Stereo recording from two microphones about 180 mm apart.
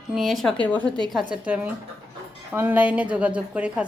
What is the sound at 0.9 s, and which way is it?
Speech, 25° right (ahead or behind).